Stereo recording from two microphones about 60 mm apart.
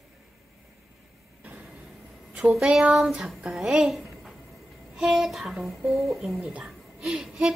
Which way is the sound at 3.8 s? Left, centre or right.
Centre.